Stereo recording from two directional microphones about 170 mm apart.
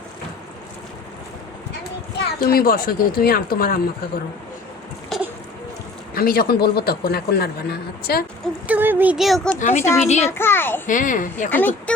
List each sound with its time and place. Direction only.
2.1 s a man's voice: 60° left (ahead or behind)
6.1 s a man's voice: 60° left (ahead or behind)
8.6 s speech: 10° right (ahead or behind)
9.6 s speech: 45° left (ahead or behind)
9.8 s a child's voice: 15° left (ahead or behind)
10.8 s speech: 50° left (ahead or behind)
11.5 s a child's voice: 10° left (ahead or behind)